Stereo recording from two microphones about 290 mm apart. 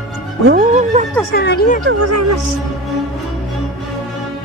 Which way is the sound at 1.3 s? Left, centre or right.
Left.